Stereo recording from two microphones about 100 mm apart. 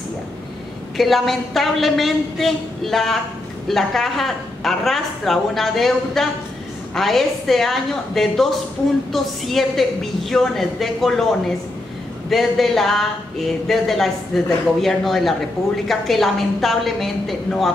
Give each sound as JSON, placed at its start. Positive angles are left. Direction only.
{"t": 0.9, "sound": "a man's voice", "side_deg": 0}
{"t": 12.3, "sound": "a man's voice", "side_deg": 0}